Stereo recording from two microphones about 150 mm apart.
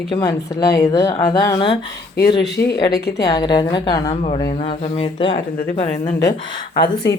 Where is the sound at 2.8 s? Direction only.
90° left.